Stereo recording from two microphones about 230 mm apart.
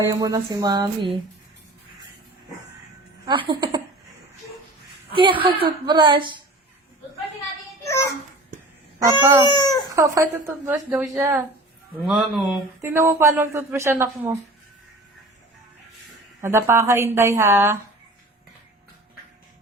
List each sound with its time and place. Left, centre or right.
0.0 s a woman's voice: centre
3.2 s speech: centre
5.1 s speech: right
7.9 s a child's voice: centre
9.5 s speech: centre
9.9 s a woman's voice: centre
16.4 s a woman's voice: centre